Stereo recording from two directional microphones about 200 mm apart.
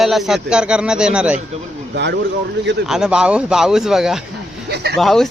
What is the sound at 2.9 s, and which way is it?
Speech, 5° right (ahead or behind).